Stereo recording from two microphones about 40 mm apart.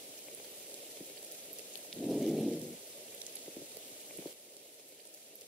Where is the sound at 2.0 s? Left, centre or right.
Centre.